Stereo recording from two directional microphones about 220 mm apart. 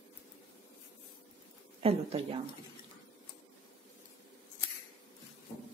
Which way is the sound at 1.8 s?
25° right (ahead or behind).